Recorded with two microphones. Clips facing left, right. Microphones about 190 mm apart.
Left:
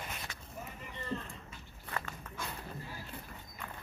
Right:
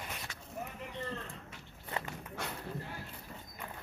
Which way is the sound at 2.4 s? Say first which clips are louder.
Right 2 dB; 65° right (ahead or behind).